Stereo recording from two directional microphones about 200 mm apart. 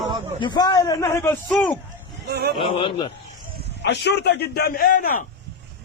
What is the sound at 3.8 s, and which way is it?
A man's voice, 60° left (ahead or behind).